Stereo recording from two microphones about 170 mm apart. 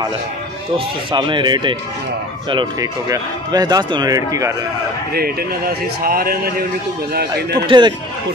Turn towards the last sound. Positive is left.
turn(degrees=-25)  # may be behind; listen again after turning